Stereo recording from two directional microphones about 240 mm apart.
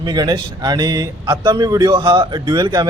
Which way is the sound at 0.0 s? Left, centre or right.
Centre.